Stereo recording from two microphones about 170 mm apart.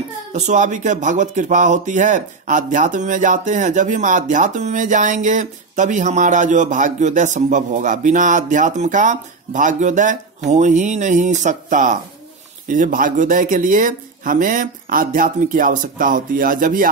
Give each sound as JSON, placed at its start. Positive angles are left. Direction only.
{"t": 0.3, "sound": "speech", "side_deg": -45}